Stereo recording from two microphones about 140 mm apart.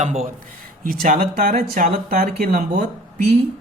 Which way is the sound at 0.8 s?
85° right.